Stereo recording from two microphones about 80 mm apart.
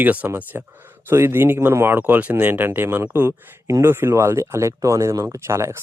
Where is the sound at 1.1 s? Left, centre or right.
Right.